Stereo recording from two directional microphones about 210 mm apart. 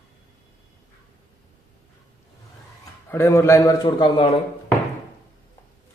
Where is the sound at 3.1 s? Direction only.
10° left (ahead or behind).